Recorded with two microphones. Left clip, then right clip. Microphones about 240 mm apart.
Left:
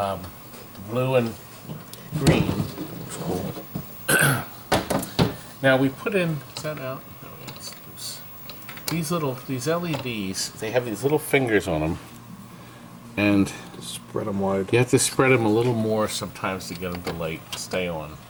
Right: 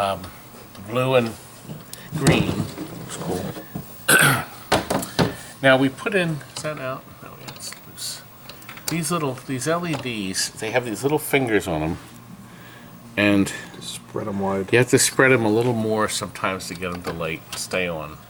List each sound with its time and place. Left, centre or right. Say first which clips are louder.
0.0 s speech: right 3 dB; centre
2.1 s speech: right 2 dB; centre
4.0 s throat clearing: right 4 dB; centre
4.9 s a sound: right 2 dB; centre
5.6 s speech: right 3 dB; centre
7.4 s vehicle: right 2 dB; centre
8.9 s speech: right 2 dB; centre
13.1 s speech: right 3 dB; centre
14.1 s speech: even; centre
14.7 s speech: right 6 dB; centre